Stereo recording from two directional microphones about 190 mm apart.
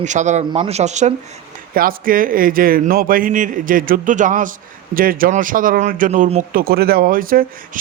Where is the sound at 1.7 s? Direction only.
50° right (ahead or behind).